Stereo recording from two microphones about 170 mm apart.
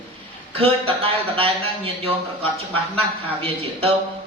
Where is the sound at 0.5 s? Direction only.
35° right (ahead or behind).